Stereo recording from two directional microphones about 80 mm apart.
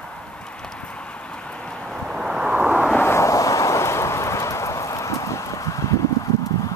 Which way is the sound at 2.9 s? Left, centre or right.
Left.